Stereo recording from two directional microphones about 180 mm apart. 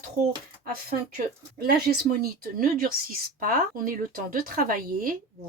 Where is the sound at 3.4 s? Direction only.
50° right (ahead or behind).